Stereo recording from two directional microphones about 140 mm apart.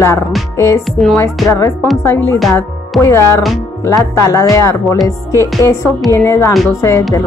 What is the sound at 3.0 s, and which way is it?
A woman's voice, 20° left (ahead or behind).